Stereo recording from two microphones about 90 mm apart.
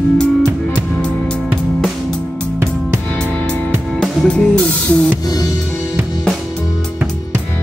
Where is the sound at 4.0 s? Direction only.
10° left (ahead or behind).